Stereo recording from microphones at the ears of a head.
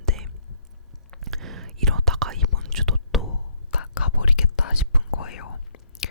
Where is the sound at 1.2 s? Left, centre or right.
Right.